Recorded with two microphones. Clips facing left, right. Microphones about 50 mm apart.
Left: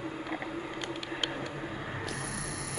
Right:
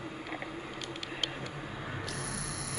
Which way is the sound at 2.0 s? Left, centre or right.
Left.